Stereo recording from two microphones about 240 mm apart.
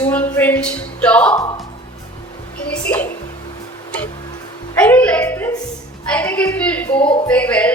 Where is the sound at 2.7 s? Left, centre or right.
Centre.